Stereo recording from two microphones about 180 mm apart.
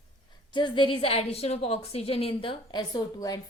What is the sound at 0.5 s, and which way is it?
A woman's voice, 25° left (ahead or behind).